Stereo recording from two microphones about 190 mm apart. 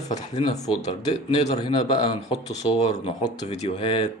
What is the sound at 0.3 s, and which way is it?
Speech, 35° left (ahead or behind).